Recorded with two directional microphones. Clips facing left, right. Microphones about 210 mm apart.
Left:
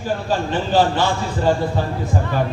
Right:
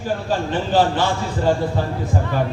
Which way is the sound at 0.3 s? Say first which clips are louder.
Left 1 dB; 55° right (ahead or behind).